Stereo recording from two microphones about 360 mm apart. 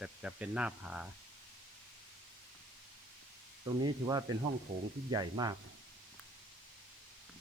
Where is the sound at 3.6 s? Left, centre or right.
Centre.